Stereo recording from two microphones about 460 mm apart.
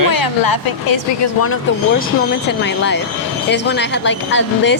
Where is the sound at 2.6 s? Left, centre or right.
Left.